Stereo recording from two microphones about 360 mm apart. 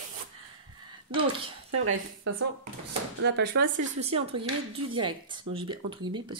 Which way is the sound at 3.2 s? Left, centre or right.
Right.